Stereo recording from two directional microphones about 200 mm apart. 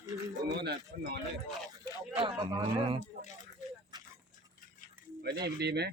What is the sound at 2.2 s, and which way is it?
Speech, 25° right (ahead or behind).